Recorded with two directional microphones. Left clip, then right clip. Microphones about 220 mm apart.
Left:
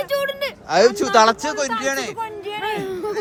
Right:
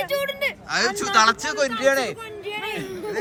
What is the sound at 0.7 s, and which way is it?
Speech, 25° left (ahead or behind).